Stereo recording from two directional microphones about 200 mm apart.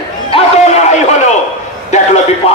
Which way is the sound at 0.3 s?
35° left (ahead or behind).